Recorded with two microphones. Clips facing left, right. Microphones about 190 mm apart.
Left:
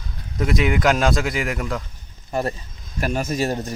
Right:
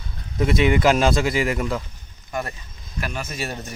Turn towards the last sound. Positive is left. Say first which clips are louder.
# left 8 dB
turn(degrees=35)  # may be behind; listen again after turning